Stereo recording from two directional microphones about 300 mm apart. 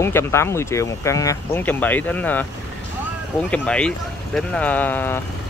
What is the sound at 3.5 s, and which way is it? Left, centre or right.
Speech, centre.